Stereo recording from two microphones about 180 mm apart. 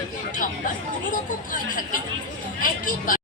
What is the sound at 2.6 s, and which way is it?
Speech, 50° left (ahead or behind).